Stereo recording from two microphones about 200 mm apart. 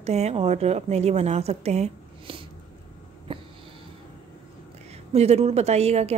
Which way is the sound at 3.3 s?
25° right (ahead or behind).